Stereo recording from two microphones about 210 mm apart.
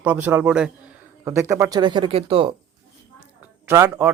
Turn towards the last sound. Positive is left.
turn(degrees=-10)  # may be behind; listen again after turning